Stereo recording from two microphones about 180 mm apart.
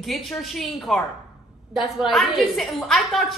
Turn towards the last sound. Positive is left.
turn(degrees=0)  # may be behind; listen again after turning